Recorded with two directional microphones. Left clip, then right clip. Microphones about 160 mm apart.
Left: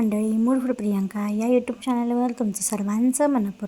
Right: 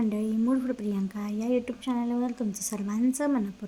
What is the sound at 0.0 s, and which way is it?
A woman's voice, 20° left (ahead or behind).